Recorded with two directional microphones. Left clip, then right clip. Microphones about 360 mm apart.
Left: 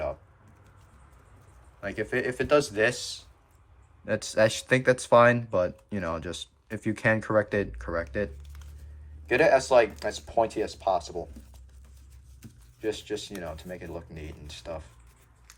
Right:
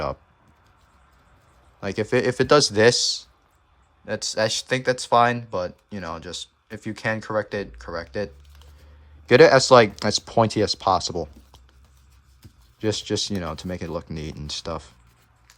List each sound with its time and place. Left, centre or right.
1.8 s speech: centre
9.2 s speech: right
12.9 s speech: right